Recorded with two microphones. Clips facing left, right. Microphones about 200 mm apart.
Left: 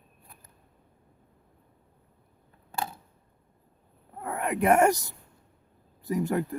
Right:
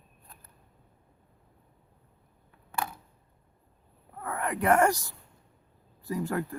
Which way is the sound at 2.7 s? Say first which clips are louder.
Even; 25° left (ahead or behind).